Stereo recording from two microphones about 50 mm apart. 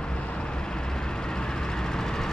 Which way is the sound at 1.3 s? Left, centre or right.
Centre.